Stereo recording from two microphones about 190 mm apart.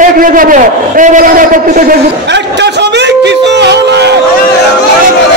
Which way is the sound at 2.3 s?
65° right (ahead or behind).